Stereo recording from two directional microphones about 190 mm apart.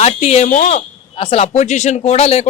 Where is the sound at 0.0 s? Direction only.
35° left (ahead or behind).